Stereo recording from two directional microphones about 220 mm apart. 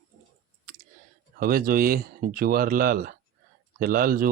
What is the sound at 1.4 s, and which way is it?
Speech, 40° right (ahead or behind).